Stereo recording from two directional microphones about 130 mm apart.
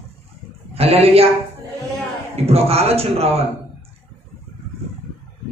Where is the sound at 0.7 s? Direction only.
50° right (ahead or behind).